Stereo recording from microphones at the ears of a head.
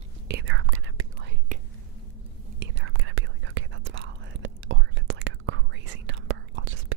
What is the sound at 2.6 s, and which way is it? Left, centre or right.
Whispering, right.